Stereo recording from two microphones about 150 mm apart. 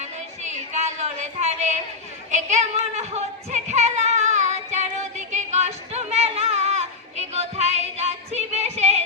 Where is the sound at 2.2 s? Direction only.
50° right (ahead or behind).